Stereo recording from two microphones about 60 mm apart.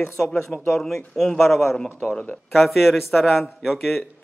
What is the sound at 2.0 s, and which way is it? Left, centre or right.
Speech, centre.